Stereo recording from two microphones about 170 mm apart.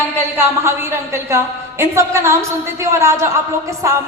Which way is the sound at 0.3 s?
15° right (ahead or behind).